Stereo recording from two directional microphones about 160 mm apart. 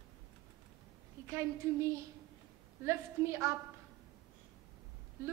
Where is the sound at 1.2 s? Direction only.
20° right (ahead or behind).